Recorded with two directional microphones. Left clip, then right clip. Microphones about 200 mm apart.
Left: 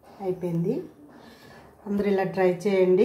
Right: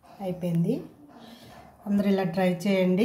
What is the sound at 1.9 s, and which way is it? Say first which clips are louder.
A woman's voice: left 2 dB; centre (ahead or behind).